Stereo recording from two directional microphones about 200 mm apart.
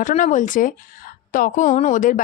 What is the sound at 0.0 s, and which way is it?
A woman's voice, 40° left (ahead or behind).